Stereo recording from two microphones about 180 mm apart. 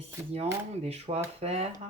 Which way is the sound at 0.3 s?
35° right (ahead or behind).